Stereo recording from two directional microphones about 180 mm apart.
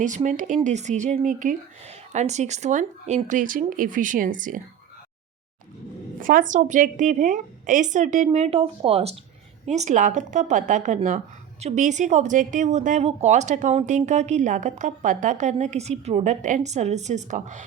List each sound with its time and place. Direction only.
0.0 s speech: 45° right (ahead or behind)
6.1 s speech: 50° right (ahead or behind)